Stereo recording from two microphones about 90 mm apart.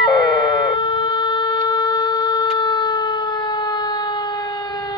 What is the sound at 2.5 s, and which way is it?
Siren, 55° left (ahead or behind).